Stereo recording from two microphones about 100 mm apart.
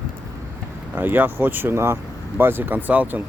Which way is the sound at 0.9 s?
20° right (ahead or behind).